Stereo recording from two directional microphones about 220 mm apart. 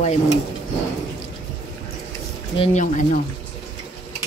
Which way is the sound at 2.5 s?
30° left (ahead or behind).